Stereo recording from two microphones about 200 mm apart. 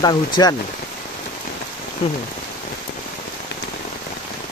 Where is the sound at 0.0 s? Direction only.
20° left (ahead or behind).